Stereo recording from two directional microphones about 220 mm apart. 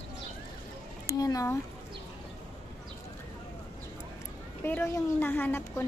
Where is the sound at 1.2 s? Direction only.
15° left (ahead or behind).